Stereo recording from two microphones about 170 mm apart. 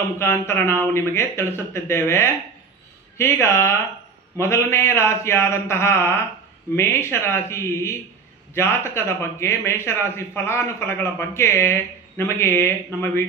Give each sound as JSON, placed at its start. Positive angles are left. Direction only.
{"t": 0.2, "sound": "speech", "side_deg": 15}